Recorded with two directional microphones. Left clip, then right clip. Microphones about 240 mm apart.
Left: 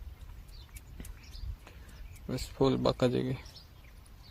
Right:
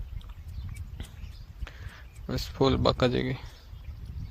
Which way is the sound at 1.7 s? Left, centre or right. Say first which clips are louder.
Right 9 dB; centre.